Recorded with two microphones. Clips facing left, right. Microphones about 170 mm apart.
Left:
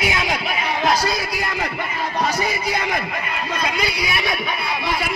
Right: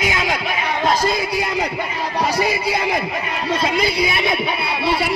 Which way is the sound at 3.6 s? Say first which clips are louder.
Right 5 dB; 25° right (ahead or behind).